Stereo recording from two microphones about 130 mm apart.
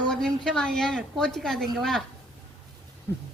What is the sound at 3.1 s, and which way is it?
Speech, 20° left (ahead or behind).